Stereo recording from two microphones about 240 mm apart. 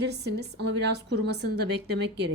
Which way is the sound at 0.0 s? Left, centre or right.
Right.